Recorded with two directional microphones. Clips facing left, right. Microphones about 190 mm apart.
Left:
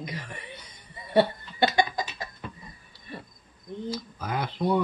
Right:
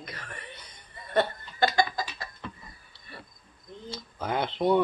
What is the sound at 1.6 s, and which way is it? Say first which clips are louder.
Chicken: left 1 dB; 20° left (ahead or behind).